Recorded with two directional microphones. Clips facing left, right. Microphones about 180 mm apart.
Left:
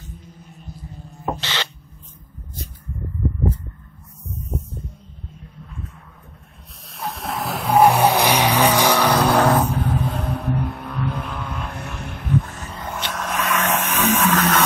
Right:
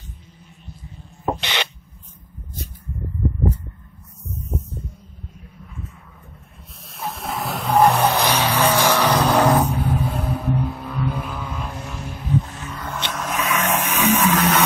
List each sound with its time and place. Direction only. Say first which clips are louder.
1.2 s spray: right 2 dB; 15° right (ahead or behind)
6.9 s vehicle: even; centre (ahead or behind)
9.4 s vehicle: even; 10° right (ahead or behind)
11.6 s vehicle: even; 60° left (ahead or behind)
12.6 s music: even; 25° left (ahead or behind)
13.1 s vehicle: even; centre (ahead or behind)